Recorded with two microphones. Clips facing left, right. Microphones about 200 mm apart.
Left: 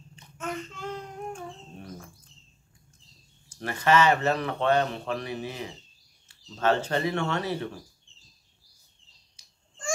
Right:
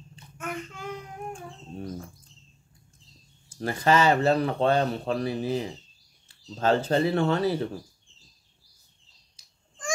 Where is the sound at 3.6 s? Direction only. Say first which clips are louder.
Even; 35° right (ahead or behind).